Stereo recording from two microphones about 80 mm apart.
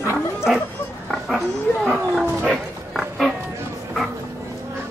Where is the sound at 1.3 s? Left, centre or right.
Centre.